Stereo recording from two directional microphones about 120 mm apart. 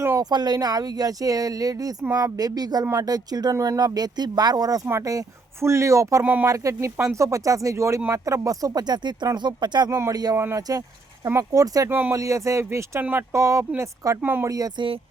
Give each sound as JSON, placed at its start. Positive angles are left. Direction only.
{"t": 0.2, "sound": "speech", "side_deg": -35}
{"t": 6.2, "sound": "speech", "side_deg": -15}
{"t": 6.5, "sound": "speech", "side_deg": -25}
{"t": 9.9, "sound": "speech", "side_deg": -25}
{"t": 11.9, "sound": "speech", "side_deg": -15}
{"t": 12.1, "sound": "speech", "side_deg": -25}
{"t": 14.2, "sound": "speech", "side_deg": -15}
{"t": 14.5, "sound": "speech", "side_deg": -30}